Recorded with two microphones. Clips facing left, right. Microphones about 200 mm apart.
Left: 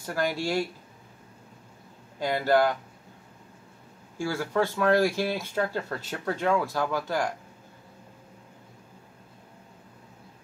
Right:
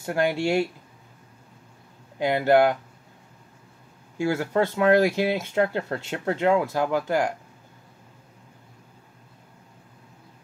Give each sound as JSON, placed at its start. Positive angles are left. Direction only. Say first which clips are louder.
{"t": 0.0, "sound": "speech", "louder": "right 5 dB", "side_deg": -25}
{"t": 2.1, "sound": "speech", "louder": "right 4 dB", "side_deg": -20}
{"t": 4.2, "sound": "speech", "louder": "right 4 dB", "side_deg": -20}